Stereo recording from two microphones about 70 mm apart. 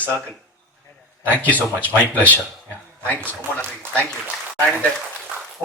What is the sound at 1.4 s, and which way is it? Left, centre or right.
A man's voice, left.